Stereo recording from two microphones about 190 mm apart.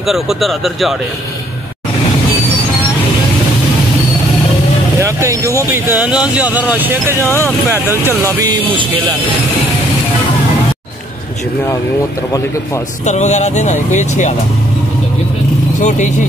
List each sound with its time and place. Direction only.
0.0 s speech: centre (ahead or behind)
5.0 s speech: 15° right (ahead or behind)
13.0 s speech: 35° left (ahead or behind)
15.8 s speech: 40° left (ahead or behind)